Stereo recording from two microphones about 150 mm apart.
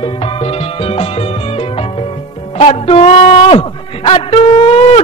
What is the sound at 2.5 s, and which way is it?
A man's voice, 45° left (ahead or behind).